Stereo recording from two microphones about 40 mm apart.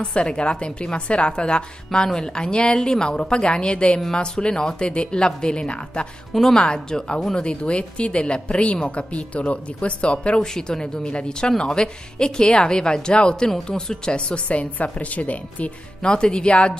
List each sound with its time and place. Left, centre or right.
0.0 s a woman's voice: left
6.3 s a woman's voice: centre; by 10.4 s left
10.4 s a woman's voice: centre; by 15.7 s left
16.0 s a woman's voice: left